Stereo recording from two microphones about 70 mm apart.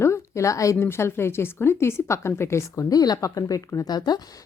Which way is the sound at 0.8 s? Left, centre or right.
Left.